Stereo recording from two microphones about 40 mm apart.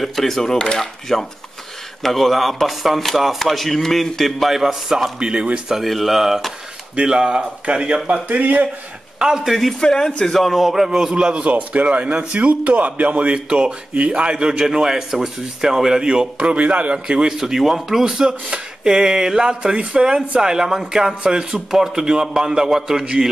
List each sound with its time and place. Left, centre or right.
0.0 s speech: centre
4.5 s speech: centre
5.2 s speech: right
5.7 s speech: centre
7.0 s speech: right
8.3 s speech: right
9.2 s speech: centre
9.8 s speech: centre
10.2 s speech: centre; by 11.4 s right
11.4 s speech: right
16.5 s speech: right
16.9 s speech: right
17.3 s speech: centre
18.0 s speech: centre